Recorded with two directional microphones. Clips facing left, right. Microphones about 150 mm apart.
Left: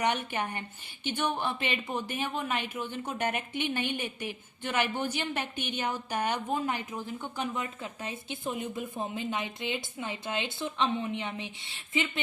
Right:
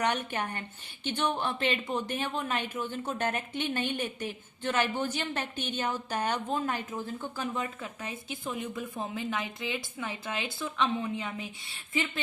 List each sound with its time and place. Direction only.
0.0 s a woman's voice: 10° left (ahead or behind)